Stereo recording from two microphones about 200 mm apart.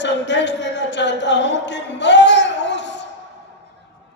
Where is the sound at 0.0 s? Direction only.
60° left (ahead or behind).